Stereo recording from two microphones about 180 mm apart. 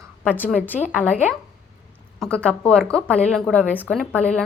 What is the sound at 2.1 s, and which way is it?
Speech, 5° left (ahead or behind).